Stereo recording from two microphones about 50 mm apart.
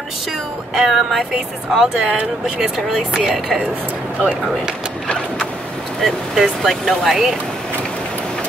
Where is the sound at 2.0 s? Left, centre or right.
Right.